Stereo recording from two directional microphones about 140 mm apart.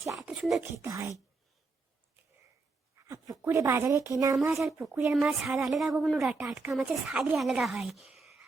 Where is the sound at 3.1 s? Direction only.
20° right (ahead or behind).